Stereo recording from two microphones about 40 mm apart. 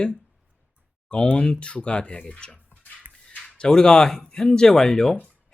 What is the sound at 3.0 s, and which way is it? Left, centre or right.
Music, right.